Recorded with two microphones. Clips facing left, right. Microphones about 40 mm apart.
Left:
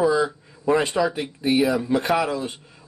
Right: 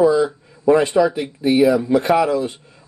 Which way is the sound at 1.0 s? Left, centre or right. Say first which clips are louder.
Right 6 dB; centre.